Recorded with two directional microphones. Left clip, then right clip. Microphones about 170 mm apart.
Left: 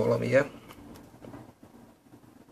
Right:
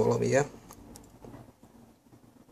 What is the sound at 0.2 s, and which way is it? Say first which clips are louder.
Speech: left 2 dB; 25° right (ahead or behind).